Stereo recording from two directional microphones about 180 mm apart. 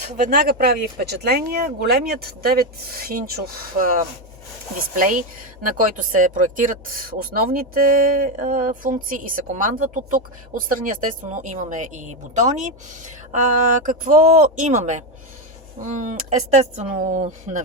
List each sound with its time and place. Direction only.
0.2 s speech: 50° right (ahead or behind)
4.9 s speech: 45° right (ahead or behind)
13.8 s speech: 50° right (ahead or behind)